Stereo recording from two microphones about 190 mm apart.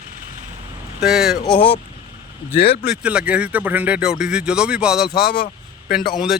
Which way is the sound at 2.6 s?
55° left (ahead or behind).